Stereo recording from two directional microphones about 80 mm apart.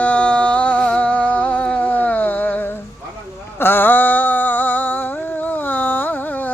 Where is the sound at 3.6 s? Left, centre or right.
Left.